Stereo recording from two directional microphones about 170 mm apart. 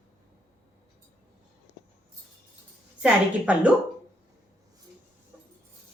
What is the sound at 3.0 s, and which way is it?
Speech, 5° right (ahead or behind).